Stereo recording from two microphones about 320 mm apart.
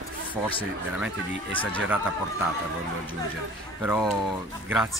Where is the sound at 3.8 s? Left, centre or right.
Centre.